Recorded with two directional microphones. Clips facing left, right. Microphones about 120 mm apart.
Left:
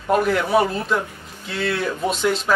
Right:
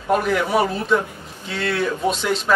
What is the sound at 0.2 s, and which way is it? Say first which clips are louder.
Speech: left 1 dB; centre (ahead or behind).